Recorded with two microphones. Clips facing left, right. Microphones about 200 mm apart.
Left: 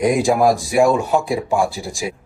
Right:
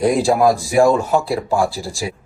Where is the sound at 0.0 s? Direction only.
15° left (ahead or behind).